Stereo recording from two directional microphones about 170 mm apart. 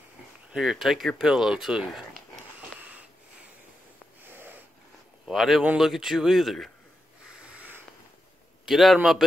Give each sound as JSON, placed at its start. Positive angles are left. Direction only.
{"t": 0.5, "sound": "speech", "side_deg": -5}
{"t": 2.8, "sound": "wheeze", "side_deg": -10}
{"t": 4.2, "sound": "wheeze", "side_deg": -10}
{"t": 5.2, "sound": "speech", "side_deg": 0}
{"t": 7.4, "sound": "a sound", "side_deg": -10}
{"t": 8.6, "sound": "speech", "side_deg": 0}